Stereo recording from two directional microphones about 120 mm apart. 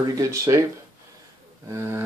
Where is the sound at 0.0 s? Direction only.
30° right (ahead or behind).